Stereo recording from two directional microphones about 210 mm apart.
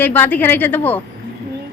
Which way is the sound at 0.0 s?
10° left (ahead or behind).